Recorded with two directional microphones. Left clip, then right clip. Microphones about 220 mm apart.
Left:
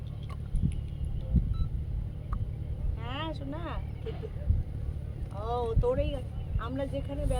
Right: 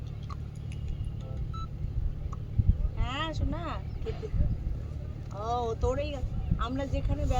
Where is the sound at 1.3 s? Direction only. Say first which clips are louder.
Left 10 dB; 25° right (ahead or behind).